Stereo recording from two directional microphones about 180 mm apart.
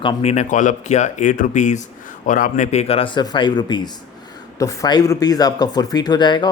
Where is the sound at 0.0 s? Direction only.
30° left (ahead or behind).